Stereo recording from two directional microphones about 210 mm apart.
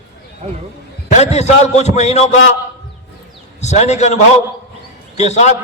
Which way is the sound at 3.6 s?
30° left (ahead or behind).